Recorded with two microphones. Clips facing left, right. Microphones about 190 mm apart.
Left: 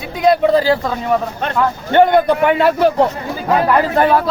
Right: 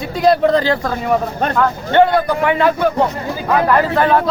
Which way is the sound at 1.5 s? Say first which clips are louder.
Left 1 dB; 15° left (ahead or behind).